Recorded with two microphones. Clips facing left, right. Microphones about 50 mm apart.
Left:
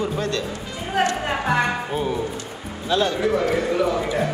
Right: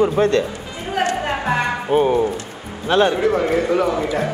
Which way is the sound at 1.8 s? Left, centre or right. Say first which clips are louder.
Right 8 dB; right.